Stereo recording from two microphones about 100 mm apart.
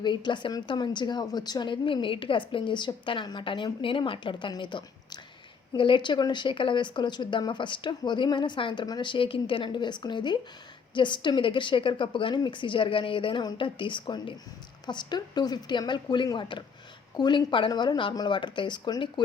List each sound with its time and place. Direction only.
0.0 s a woman's voice: 50° left (ahead or behind)